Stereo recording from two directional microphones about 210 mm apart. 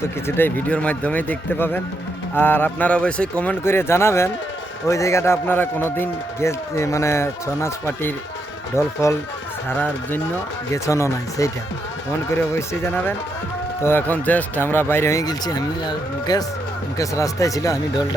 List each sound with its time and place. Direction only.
0.3 s a man's voice: 10° left (ahead or behind)
12.5 s a man's voice: 10° left (ahead or behind)